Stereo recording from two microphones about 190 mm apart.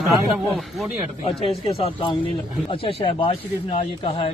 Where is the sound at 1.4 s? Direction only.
30° left (ahead or behind).